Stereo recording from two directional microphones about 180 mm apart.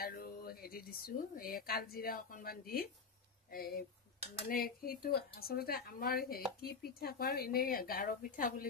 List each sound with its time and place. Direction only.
0.0 s speech: 55° left (ahead or behind)